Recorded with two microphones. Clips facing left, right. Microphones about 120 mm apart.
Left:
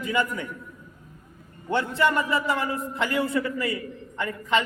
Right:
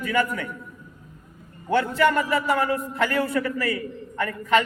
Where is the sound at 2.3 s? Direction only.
60° right (ahead or behind).